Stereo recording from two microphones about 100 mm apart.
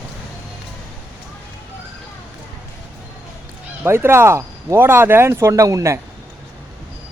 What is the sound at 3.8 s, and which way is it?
Speech, 20° right (ahead or behind).